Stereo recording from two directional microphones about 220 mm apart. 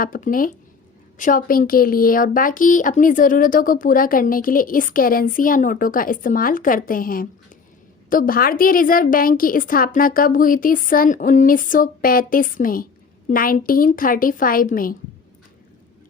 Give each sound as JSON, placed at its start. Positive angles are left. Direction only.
{"t": 0.0, "sound": "a woman's voice", "side_deg": 40}